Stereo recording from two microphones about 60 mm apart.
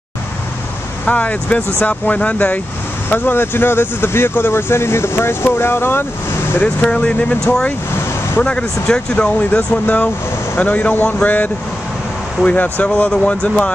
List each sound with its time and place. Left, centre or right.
1.0 s speech: left
6.6 s speech: centre
8.4 s speech: centre